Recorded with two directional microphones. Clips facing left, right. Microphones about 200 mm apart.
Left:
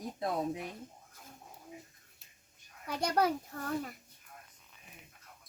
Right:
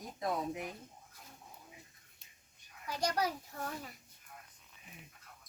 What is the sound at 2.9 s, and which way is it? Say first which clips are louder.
A child's voice: left 4 dB; 55° left (ahead or behind).